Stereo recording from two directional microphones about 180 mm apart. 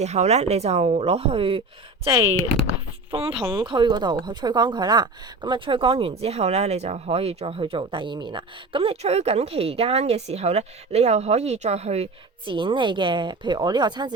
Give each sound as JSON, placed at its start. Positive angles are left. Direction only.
{"t": 0.0, "sound": "a woman's voice", "side_deg": -40}
{"t": 2.6, "sound": "a sound", "side_deg": -30}
{"t": 3.5, "sound": "a woman's voice", "side_deg": -25}